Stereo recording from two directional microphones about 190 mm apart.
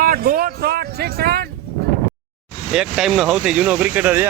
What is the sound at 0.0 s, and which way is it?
Speech, 50° right (ahead or behind).